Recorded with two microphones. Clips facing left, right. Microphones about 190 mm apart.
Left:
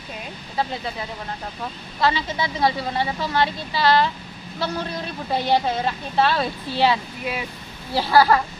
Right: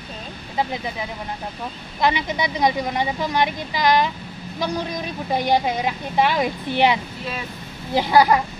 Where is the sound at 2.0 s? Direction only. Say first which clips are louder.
Right 1 dB; 15° right (ahead or behind).